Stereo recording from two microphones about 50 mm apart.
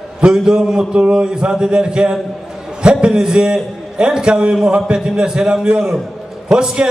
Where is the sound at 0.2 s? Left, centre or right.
Centre.